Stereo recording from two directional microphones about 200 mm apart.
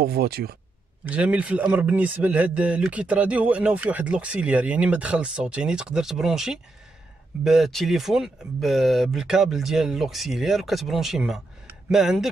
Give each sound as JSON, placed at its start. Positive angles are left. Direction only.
{"t": 0.0, "sound": "speech", "side_deg": -50}
{"t": 1.0, "sound": "speech", "side_deg": -5}